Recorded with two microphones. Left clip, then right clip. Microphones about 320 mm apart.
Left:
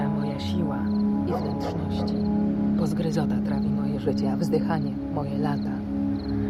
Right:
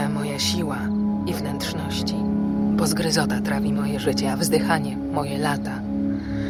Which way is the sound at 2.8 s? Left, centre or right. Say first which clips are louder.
Right 5 dB; right.